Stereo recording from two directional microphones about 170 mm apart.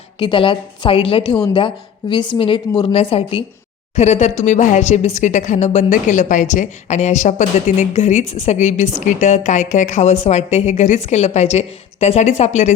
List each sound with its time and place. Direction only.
0.2 s a woman's voice: 30° left (ahead or behind)